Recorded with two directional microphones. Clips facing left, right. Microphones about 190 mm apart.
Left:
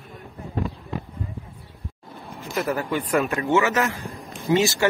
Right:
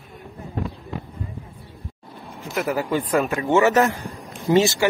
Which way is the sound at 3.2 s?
20° right (ahead or behind).